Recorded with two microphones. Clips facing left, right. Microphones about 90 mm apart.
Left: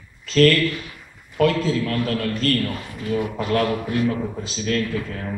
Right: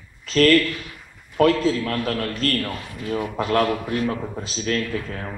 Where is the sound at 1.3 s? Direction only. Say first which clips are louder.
Right 1 dB; 40° right (ahead or behind).